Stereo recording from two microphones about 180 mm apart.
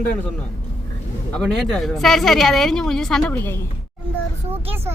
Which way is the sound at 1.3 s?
5° left (ahead or behind).